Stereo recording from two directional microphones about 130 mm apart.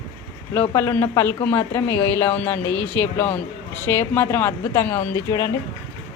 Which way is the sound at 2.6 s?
35° right (ahead or behind).